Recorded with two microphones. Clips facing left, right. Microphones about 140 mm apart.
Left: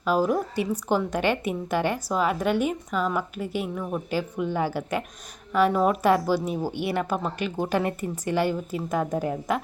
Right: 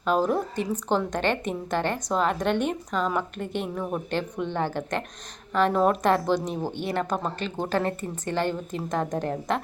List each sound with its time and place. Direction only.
0.0 s a woman's voice: 5° left (ahead or behind)